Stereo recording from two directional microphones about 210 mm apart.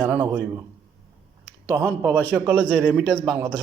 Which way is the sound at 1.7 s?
10° left (ahead or behind).